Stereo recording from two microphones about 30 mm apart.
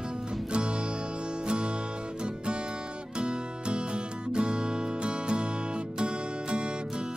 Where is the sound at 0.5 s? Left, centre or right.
Right.